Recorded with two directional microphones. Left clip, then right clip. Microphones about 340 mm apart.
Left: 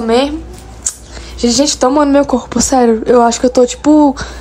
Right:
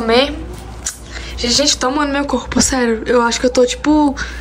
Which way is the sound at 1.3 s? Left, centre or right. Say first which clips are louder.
Left 3 dB; centre.